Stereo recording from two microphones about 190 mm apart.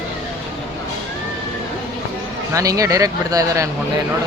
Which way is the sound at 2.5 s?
15° right (ahead or behind).